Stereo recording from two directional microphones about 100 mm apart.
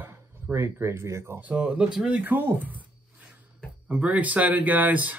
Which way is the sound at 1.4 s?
15° right (ahead or behind).